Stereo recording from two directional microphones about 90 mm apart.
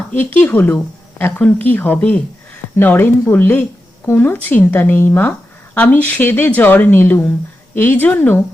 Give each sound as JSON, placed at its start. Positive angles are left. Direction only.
{"t": 0.2, "sound": "speech", "side_deg": 20}